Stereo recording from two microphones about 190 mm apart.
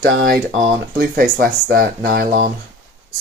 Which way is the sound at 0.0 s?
60° right (ahead or behind).